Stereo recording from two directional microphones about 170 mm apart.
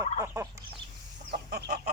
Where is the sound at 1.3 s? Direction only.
75° right (ahead or behind).